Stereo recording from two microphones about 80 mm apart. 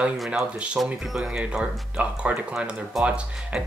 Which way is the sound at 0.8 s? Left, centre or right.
Centre.